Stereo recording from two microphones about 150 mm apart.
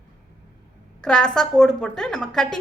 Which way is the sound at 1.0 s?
5° left (ahead or behind).